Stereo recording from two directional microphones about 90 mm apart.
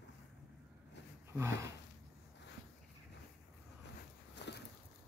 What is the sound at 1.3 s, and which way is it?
Speech, 30° right (ahead or behind).